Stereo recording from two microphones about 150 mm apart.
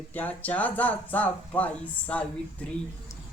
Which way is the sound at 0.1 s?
10° left (ahead or behind).